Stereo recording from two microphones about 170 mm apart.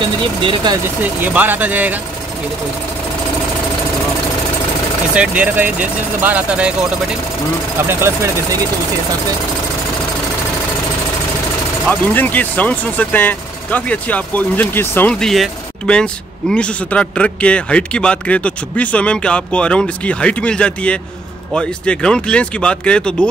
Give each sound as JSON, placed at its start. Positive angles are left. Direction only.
{"t": 0.0, "sound": "speech", "side_deg": -30}
{"t": 0.8, "sound": "speech", "side_deg": -10}
{"t": 5.1, "sound": "speech", "side_deg": -5}
{"t": 7.9, "sound": "speech", "side_deg": -15}
{"t": 11.9, "sound": "speech", "side_deg": 10}